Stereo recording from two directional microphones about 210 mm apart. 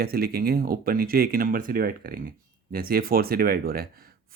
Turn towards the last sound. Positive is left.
turn(degrees=-45)  # may be behind; listen again after turning